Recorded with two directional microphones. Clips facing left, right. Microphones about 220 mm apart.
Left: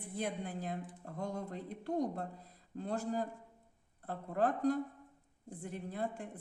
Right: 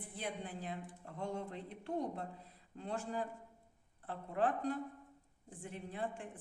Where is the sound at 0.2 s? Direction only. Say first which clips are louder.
Left 5 dB; 45° left (ahead or behind).